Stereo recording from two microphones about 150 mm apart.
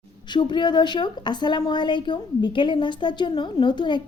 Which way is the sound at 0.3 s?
30° left (ahead or behind).